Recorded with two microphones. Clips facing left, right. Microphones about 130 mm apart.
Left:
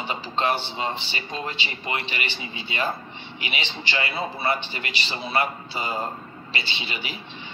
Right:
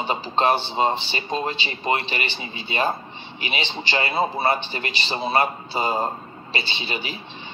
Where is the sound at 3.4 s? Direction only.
30° right (ahead or behind).